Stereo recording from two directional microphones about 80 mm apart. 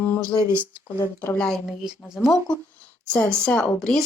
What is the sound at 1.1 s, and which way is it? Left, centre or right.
Speech, left.